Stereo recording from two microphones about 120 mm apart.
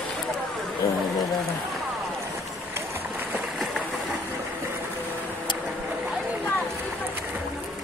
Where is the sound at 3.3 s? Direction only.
Centre (ahead or behind).